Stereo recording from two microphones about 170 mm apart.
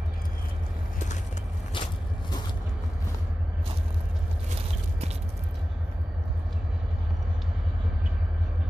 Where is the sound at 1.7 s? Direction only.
30° left (ahead or behind).